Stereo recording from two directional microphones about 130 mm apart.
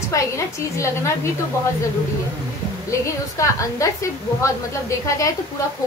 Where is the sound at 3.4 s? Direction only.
25° left (ahead or behind).